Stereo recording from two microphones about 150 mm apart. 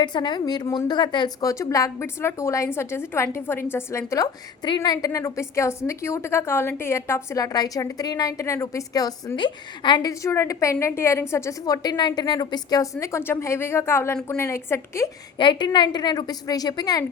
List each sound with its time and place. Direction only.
0.0 s a woman's voice: 30° left (ahead or behind)
15.4 s a woman's voice: 30° left (ahead or behind)